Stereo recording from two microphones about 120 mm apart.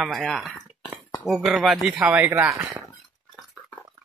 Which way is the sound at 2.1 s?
15° right (ahead or behind).